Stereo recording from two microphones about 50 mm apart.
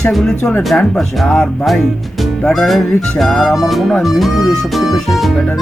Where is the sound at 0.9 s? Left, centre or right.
Centre.